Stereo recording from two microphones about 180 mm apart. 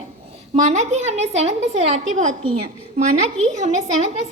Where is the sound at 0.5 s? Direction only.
40° right (ahead or behind).